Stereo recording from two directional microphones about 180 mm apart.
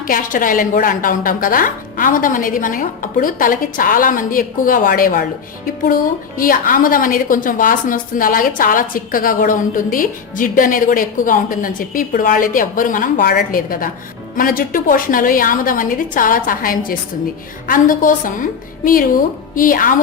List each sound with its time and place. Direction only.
0.0 s a woman's voice: 50° left (ahead or behind)
6.4 s a woman's voice: 50° left (ahead or behind)
19.5 s a woman's voice: 50° left (ahead or behind)